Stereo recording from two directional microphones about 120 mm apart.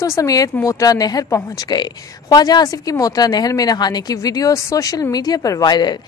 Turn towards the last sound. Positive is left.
turn(degrees=35)  # may be behind; listen again after turning